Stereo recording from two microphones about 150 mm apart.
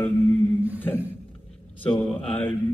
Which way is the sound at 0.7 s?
15° left (ahead or behind).